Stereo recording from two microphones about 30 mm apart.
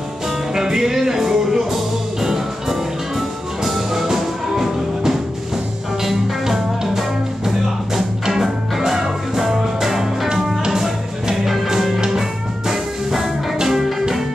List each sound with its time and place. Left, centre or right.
0.6 s music: centre